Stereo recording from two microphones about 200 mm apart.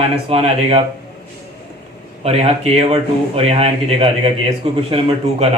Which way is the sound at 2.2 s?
30° right (ahead or behind).